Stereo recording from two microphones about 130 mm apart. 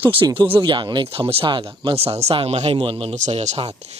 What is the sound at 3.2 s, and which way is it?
Speech, 60° right (ahead or behind).